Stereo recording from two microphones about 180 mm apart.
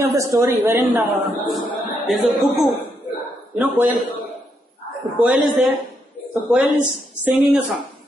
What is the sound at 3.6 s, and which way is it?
Speech, 10° right (ahead or behind).